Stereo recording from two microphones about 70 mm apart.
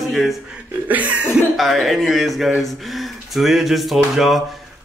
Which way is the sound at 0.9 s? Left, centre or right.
Right.